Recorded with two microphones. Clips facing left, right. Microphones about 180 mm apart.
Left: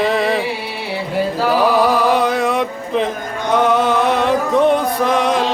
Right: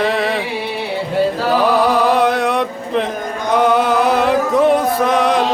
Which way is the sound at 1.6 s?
Centre (ahead or behind).